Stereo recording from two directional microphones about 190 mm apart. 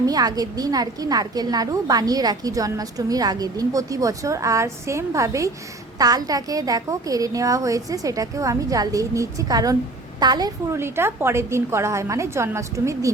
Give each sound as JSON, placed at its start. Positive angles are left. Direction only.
{"t": 0.0, "sound": "a woman's voice", "side_deg": -20}